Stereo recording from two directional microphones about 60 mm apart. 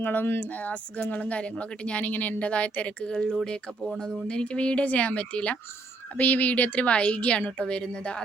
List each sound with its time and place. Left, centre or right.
0.0 s speech: left; by 4.2 s centre
4.3 s speech: centre